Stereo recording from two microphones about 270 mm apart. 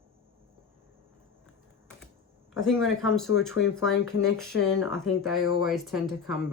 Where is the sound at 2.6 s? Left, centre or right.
Centre.